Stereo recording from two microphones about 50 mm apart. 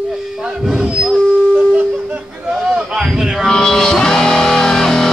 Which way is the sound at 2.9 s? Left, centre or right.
Centre.